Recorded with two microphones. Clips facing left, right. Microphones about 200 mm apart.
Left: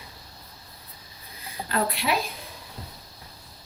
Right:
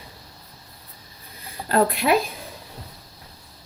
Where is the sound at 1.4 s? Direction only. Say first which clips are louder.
Right 6 dB; 30° right (ahead or behind).